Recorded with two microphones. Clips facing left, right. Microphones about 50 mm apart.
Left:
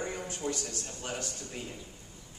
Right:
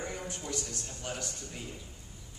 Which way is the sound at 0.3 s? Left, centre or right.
Left.